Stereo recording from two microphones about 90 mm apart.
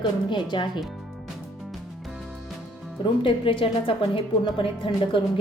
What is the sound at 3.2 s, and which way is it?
A woman's voice, 75° left (ahead or behind).